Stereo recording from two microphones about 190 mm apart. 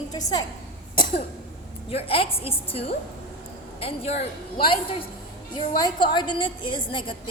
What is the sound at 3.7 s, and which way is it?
A woman's voice, 30° left (ahead or behind).